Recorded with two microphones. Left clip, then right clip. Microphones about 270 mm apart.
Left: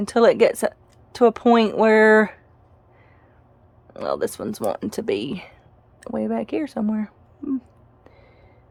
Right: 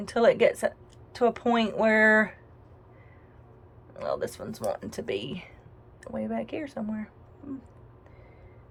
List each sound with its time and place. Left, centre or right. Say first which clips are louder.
0.0 s speech: left 6 dB; left
3.9 s speech: left 6 dB; left